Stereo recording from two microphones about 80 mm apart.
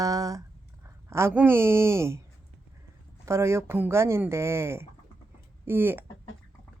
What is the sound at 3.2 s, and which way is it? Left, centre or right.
Speech, right.